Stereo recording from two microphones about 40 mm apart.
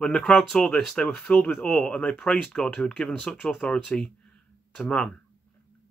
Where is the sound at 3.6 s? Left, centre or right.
Left.